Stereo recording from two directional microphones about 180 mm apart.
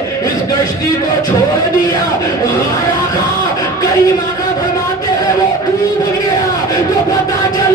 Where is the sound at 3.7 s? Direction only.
20° left (ahead or behind).